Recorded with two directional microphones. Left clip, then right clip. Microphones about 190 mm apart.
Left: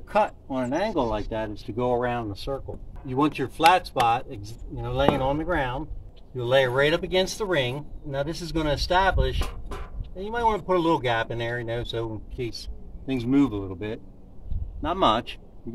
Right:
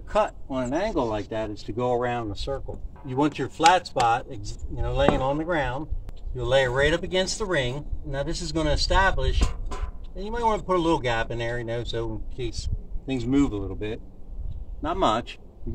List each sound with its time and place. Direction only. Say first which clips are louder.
0.1 s speech: left 1 dB; 25° left (ahead or behind)
14.8 s speech: left 1 dB; 30° left (ahead or behind)